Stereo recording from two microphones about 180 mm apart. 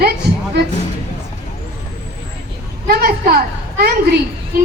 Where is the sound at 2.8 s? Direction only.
60° right (ahead or behind).